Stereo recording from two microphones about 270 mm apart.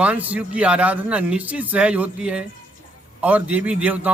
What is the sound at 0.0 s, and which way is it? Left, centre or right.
Speech, centre.